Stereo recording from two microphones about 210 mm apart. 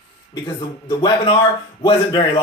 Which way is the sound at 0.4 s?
20° left (ahead or behind).